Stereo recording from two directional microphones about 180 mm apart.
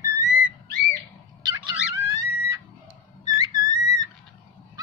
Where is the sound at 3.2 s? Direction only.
20° right (ahead or behind).